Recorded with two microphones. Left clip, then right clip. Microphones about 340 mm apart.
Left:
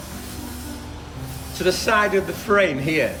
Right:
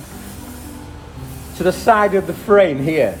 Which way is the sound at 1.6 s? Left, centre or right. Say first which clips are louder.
Right 5 dB; centre.